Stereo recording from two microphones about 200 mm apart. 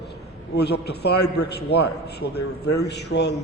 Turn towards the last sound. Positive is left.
turn(degrees=55)  # may be behind; listen again after turning